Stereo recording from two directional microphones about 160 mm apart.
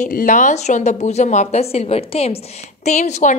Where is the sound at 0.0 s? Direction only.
55° left (ahead or behind).